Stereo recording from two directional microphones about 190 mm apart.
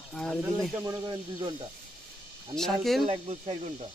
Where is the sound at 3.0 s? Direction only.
35° right (ahead or behind).